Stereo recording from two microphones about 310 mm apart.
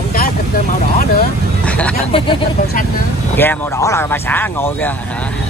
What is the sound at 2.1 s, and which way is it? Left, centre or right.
Speech, centre.